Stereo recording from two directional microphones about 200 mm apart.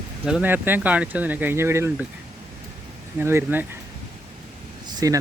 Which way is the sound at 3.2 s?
10° right (ahead or behind).